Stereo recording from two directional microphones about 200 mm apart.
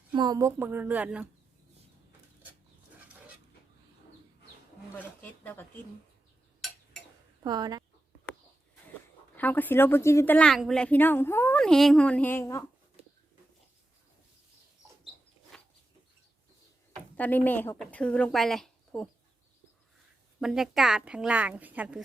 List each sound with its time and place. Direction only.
0.1 s speech: 20° right (ahead or behind)
5.2 s a sound: 10° left (ahead or behind)
7.4 s speech: 20° right (ahead or behind)
9.3 s a woman's voice: 10° left (ahead or behind)
15.5 s a sound: 5° left (ahead or behind)
16.9 s speech: 5° left (ahead or behind)
20.4 s a woman's voice: centre (ahead or behind)